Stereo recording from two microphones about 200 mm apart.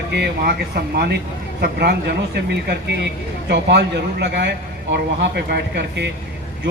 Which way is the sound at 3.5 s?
55° right (ahead or behind).